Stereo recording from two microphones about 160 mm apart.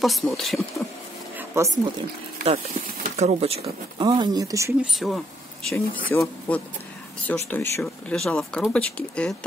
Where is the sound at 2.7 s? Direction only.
60° right (ahead or behind).